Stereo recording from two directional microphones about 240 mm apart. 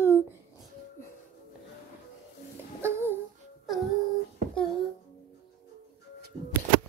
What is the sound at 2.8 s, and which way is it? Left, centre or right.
Babbling, centre.